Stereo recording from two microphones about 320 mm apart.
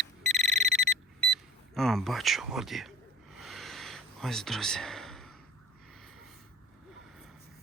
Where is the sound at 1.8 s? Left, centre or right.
Centre.